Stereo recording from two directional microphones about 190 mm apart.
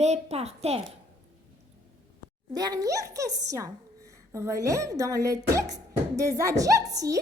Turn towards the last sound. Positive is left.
turn(degrees=-15)  # may be behind; listen again after turning